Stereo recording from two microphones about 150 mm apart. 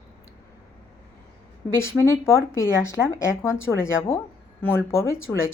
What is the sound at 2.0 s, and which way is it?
A woman's voice, 20° left (ahead or behind).